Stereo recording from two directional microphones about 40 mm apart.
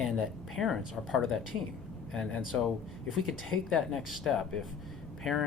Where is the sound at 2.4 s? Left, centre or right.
Centre.